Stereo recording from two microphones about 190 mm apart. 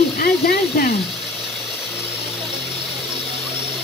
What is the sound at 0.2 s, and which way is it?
Speech, 55° left (ahead or behind).